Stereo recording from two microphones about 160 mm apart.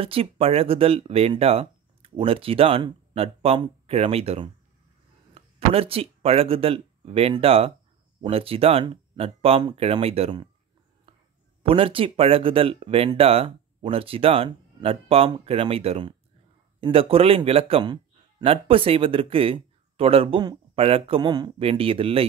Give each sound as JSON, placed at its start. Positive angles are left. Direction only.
{"t": 0.0, "sound": "a man's voice", "side_deg": -35}
{"t": 11.6, "sound": "a man's voice", "side_deg": -35}